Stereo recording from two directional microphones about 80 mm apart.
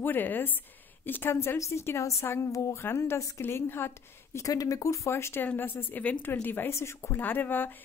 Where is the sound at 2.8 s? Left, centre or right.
Left.